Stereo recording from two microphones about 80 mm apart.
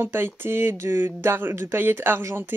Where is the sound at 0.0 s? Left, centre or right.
Right.